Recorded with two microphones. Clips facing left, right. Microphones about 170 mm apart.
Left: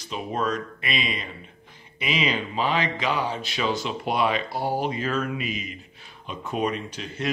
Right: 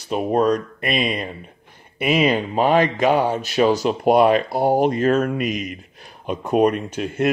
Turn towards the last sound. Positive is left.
turn(degrees=-55)  # may be behind; listen again after turning